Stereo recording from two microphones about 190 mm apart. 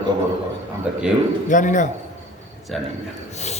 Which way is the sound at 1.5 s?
40° left (ahead or behind).